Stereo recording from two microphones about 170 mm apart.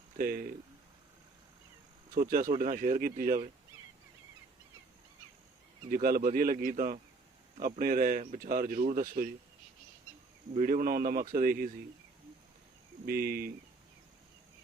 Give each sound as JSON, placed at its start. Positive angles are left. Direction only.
{"t": 0.2, "sound": "speech", "side_deg": -60}
{"t": 2.1, "sound": "speech", "side_deg": -55}
{"t": 5.9, "sound": "speech", "side_deg": -60}
{"t": 10.5, "sound": "speech", "side_deg": -50}
{"t": 13.1, "sound": "speech", "side_deg": -65}